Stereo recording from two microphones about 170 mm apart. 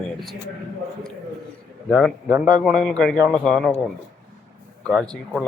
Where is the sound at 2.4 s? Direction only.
Centre (ahead or behind).